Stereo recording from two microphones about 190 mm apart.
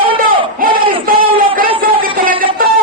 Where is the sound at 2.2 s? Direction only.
50° right (ahead or behind).